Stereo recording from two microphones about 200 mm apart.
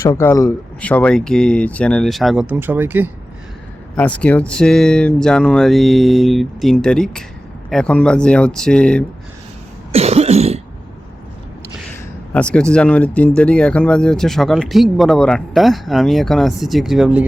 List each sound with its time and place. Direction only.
0.0 s speech: 15° left (ahead or behind); by 3.1 s 10° right (ahead or behind)
3.9 s speech: 5° left (ahead or behind)
9.9 s cough: 30° right (ahead or behind)
12.3 s speech: 5° left (ahead or behind)